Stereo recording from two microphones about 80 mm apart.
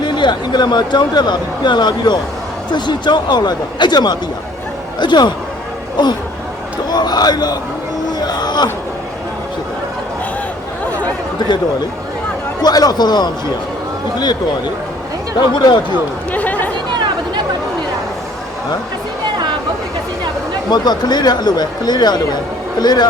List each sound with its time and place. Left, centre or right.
0.0 s speech: left
6.9 s speech: left
8.2 s a sound: left
11.3 s chatter: left
12.6 s speech: left
15.4 s speech: left
16.3 s chatter: centre
20.7 s speech: left